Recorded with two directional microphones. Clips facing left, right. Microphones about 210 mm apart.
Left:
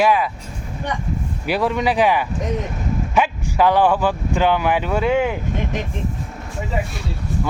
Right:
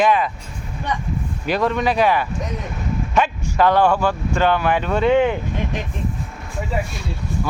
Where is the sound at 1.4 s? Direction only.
10° left (ahead or behind).